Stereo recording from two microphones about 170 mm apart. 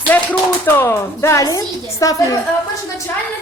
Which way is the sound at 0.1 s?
10° left (ahead or behind).